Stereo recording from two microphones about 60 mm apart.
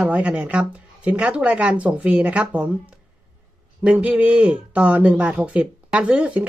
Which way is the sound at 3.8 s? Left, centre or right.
Right.